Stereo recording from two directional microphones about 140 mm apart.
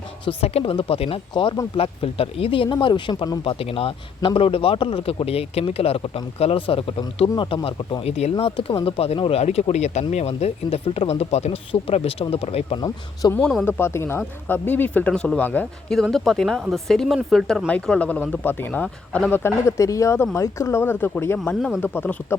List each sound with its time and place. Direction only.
0.3 s speech: 45° left (ahead or behind)
8.0 s speech: 50° left (ahead or behind)
13.3 s speech: 5° left (ahead or behind)
13.7 s speech: 15° left (ahead or behind)
16.0 s speech: centre (ahead or behind)
21.3 s speech: 5° left (ahead or behind)
21.8 s speech: 15° left (ahead or behind)